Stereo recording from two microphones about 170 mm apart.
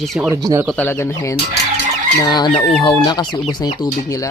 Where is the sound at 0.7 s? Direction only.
15° left (ahead or behind).